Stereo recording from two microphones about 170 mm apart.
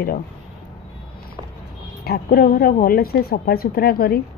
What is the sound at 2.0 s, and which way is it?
Speech, 60° left (ahead or behind).